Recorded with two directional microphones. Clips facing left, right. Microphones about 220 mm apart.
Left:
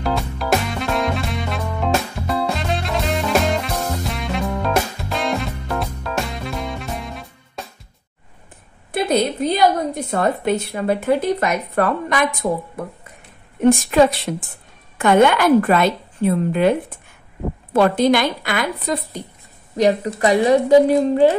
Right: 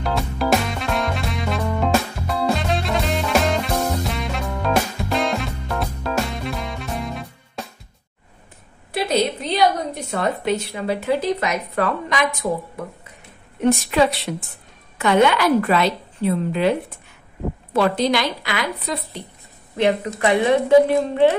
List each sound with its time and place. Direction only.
0.0 s music: centre (ahead or behind)
8.9 s a sound: 50° left (ahead or behind)
10.1 s speech: 55° left (ahead or behind)
13.6 s speech: 45° left (ahead or behind)
17.7 s speech: 50° left (ahead or behind)
19.8 s a woman's voice: 35° left (ahead or behind)